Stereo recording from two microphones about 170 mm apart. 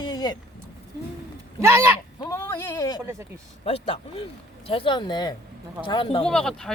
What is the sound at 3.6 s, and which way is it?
Speech, 35° left (ahead or behind).